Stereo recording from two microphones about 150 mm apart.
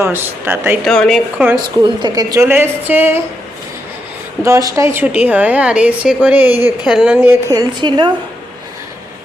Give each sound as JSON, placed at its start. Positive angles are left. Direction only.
{"t": 0.0, "sound": "a woman's voice", "side_deg": -15}
{"t": 0.9, "sound": "a woman's voice", "side_deg": 5}
{"t": 1.5, "sound": "a woman's voice", "side_deg": -30}
{"t": 4.4, "sound": "a woman's voice", "side_deg": -20}